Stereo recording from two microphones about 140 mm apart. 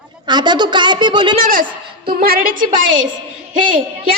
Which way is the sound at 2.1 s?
90° right.